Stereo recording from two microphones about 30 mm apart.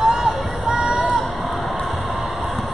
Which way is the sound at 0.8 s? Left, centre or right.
Right.